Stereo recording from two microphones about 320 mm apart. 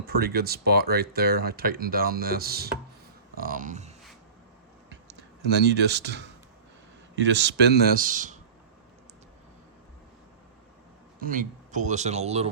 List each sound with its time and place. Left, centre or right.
0.0 s speech: right
5.5 s speech: right
11.2 s speech: right